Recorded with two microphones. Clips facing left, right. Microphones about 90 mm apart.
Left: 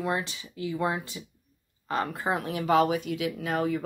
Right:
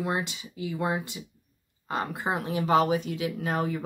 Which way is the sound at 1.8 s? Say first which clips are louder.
Left 1 dB; 20° right (ahead or behind).